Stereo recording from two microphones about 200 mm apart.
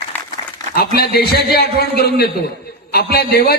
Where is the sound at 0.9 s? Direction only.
50° left (ahead or behind).